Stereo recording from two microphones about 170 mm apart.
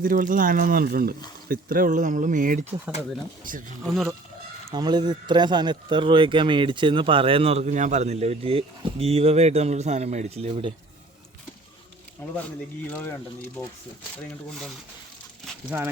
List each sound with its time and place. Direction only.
0.0 s speech: 55° right (ahead or behind)
3.8 s speech: centre (ahead or behind)
4.7 s speech: 25° right (ahead or behind)
12.9 s speech: 15° left (ahead or behind)
15.7 s speech: 10° right (ahead or behind)